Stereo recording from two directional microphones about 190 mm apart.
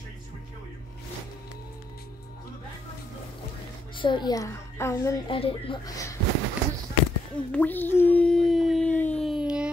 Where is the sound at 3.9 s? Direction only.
25° left (ahead or behind).